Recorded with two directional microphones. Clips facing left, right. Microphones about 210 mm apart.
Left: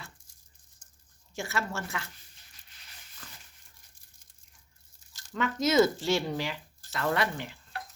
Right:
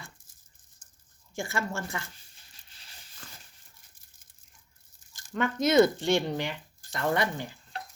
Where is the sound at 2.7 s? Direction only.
30° right (ahead or behind).